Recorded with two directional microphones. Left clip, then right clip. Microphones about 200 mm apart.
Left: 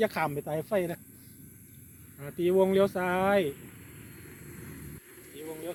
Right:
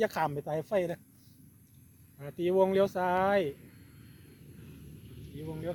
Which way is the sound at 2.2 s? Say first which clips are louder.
Left 2 dB; 50° right (ahead or behind).